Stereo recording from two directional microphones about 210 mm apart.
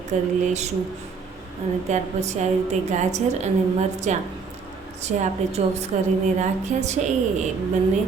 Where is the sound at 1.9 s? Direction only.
30° right (ahead or behind).